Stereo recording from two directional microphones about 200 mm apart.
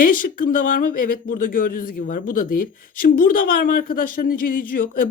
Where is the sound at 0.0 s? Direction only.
45° left (ahead or behind).